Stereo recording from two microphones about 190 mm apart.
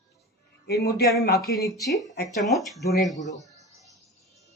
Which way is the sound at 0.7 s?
55° left (ahead or behind).